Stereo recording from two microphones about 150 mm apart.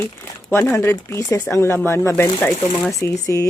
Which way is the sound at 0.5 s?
15° left (ahead or behind).